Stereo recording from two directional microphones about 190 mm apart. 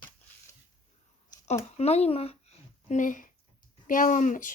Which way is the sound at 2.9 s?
45° left (ahead or behind).